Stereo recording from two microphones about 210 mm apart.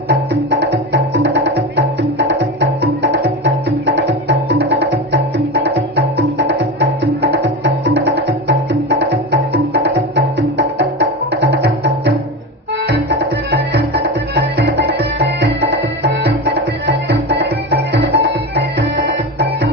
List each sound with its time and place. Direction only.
0.1 s music: 55° right (ahead or behind)
11.3 s music: 55° right (ahead or behind)
16.8 s music: 55° right (ahead or behind)